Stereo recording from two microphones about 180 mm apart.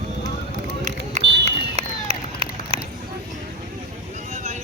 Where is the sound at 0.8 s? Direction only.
40° right (ahead or behind).